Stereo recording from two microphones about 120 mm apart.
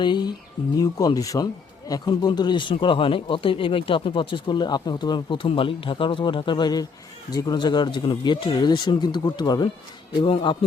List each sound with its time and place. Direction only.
0.0 s speech: 40° left (ahead or behind)